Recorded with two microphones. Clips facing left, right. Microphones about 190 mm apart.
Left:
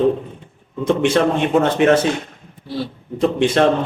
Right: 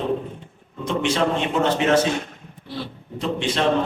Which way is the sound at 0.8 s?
55° left (ahead or behind).